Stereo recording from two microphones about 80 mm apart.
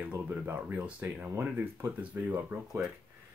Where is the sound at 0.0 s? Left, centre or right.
Right.